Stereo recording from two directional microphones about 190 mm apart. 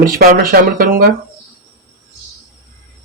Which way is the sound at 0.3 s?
50° right (ahead or behind).